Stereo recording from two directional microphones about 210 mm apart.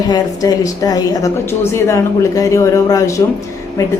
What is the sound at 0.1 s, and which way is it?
A woman's voice, 15° left (ahead or behind).